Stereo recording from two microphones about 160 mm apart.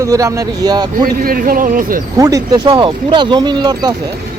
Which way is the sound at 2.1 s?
20° right (ahead or behind).